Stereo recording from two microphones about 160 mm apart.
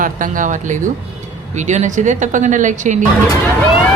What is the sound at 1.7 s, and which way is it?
Speech, 50° right (ahead or behind).